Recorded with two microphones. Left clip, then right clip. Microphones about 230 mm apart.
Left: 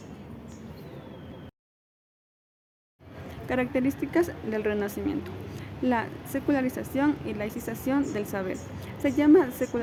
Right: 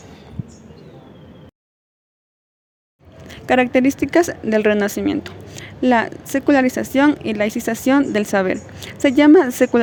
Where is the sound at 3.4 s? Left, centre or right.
Right.